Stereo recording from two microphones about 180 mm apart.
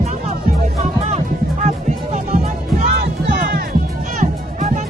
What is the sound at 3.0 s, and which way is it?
Music, 55° right (ahead or behind).